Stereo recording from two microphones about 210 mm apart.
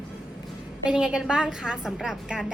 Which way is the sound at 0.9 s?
5° right (ahead or behind).